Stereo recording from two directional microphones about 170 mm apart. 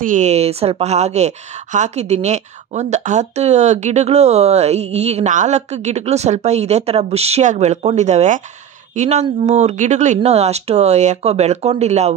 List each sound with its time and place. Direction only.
0.0 s a woman's voice: 45° right (ahead or behind)